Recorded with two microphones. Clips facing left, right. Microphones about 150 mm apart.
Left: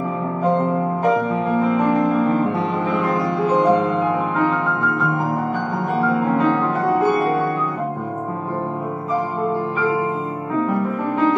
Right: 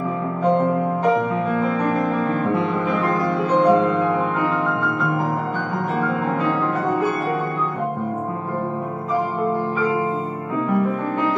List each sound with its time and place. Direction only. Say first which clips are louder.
3.5 s music: right 2 dB; 20° left (ahead or behind)